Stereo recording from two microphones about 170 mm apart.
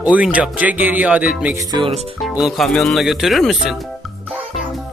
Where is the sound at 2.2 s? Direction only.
Centre (ahead or behind).